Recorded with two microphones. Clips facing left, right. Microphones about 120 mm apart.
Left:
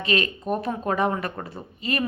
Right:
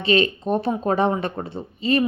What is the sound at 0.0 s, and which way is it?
A woman's voice, 30° right (ahead or behind).